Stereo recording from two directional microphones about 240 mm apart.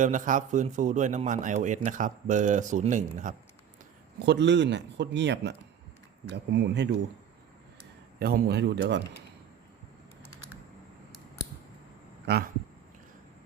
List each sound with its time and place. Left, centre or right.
0.0 s a man's voice: right
4.3 s speech: right
8.2 s speech: right
12.2 s speech: right